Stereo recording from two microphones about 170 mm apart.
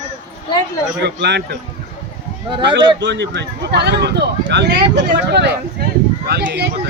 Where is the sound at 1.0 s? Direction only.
85° right.